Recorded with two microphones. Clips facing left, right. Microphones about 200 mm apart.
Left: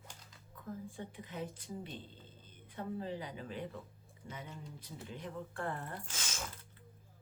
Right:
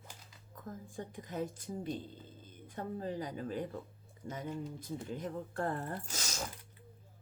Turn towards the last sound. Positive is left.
turn(degrees=-40)  # may be behind; listen again after turning